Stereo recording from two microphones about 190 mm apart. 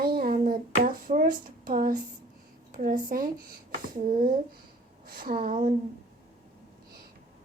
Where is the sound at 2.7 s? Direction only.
45° right (ahead or behind).